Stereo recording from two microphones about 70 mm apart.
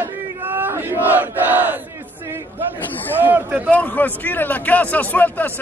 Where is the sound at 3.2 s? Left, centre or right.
Right.